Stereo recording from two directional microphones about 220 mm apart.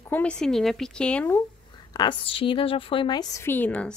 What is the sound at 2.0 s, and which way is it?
Speech, 20° left (ahead or behind).